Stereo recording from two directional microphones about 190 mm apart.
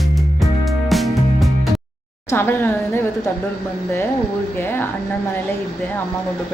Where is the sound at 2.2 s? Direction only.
10° left (ahead or behind).